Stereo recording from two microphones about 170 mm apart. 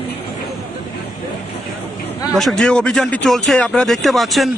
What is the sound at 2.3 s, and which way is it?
A man's voice, centre (ahead or behind).